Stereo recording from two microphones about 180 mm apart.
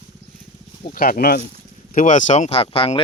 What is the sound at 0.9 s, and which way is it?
Speech, 55° left (ahead or behind).